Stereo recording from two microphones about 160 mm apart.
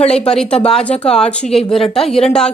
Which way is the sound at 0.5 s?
40° left (ahead or behind).